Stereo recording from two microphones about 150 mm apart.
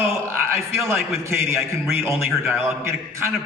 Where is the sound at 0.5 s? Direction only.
15° right (ahead or behind).